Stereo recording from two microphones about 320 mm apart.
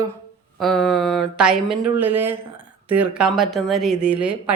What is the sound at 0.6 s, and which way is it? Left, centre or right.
Speech, centre.